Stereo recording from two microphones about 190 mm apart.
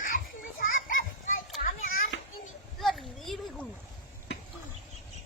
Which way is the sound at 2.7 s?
Centre (ahead or behind).